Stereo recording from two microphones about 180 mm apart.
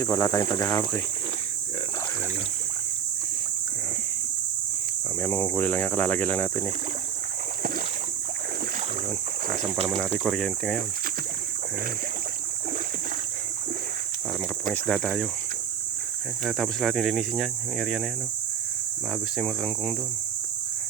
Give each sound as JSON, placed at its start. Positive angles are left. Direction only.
{"t": 0.0, "sound": "speech", "side_deg": 20}
{"t": 5.2, "sound": "speech", "side_deg": 10}
{"t": 9.8, "sound": "speech", "side_deg": 5}
{"t": 14.7, "sound": "speech", "side_deg": 0}
{"t": 16.4, "sound": "speech", "side_deg": 0}
{"t": 19.4, "sound": "speech", "side_deg": 0}